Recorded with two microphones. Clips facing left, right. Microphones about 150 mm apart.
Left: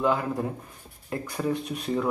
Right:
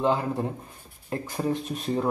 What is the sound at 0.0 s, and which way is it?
A man's voice, 25° right (ahead or behind).